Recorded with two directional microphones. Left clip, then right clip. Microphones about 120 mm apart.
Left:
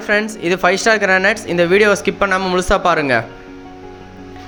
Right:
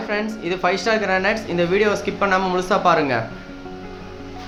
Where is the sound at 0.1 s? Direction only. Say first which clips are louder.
Left 9 dB; 55° left (ahead or behind).